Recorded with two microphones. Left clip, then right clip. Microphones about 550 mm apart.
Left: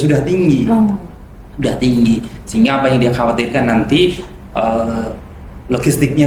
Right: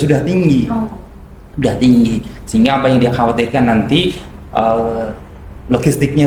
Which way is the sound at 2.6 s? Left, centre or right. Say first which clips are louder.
Right 1 dB; right.